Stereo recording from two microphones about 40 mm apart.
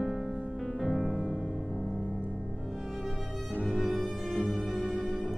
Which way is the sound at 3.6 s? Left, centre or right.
Centre.